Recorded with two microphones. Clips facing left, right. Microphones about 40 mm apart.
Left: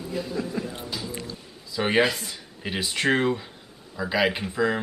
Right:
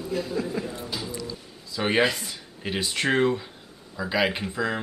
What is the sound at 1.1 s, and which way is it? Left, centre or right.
Music, left.